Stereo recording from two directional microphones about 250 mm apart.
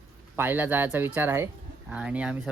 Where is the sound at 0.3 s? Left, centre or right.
Centre.